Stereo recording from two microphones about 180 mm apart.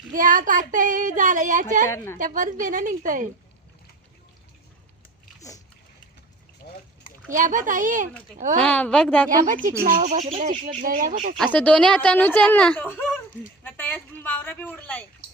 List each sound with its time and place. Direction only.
0.1 s speech: 50° right (ahead or behind)
1.9 s speech: 15° left (ahead or behind)
2.1 s speech: 45° right (ahead or behind)
7.3 s speech: 45° right (ahead or behind)
8.6 s speech: 10° left (ahead or behind)
9.5 s speech: 50° right (ahead or behind)
10.8 s speech: 50° right (ahead or behind)
11.5 s speech: 5° left (ahead or behind)